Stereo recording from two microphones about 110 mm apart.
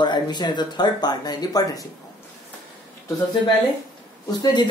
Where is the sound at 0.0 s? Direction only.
40° left (ahead or behind).